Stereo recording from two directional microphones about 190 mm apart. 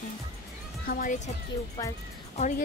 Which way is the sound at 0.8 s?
45° left (ahead or behind).